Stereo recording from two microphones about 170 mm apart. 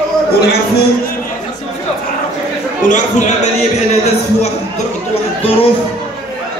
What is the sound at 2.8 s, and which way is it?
Speech, 45° left (ahead or behind).